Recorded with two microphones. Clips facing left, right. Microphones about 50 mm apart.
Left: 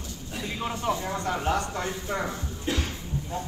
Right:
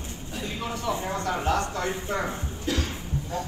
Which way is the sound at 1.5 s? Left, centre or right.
Left.